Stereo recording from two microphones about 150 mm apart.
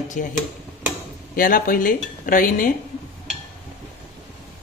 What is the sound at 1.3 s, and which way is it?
Speech, 70° left (ahead or behind).